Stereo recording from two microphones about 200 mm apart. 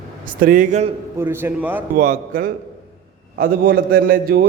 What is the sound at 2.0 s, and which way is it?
A man's voice, 40° right (ahead or behind).